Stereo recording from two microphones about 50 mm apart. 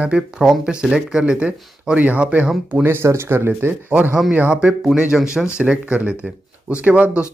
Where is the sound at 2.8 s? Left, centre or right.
Right.